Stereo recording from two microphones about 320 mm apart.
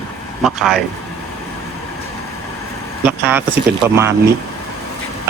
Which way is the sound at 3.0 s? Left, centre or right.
Centre.